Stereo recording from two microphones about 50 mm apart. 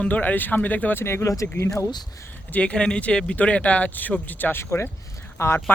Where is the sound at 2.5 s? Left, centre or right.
Left.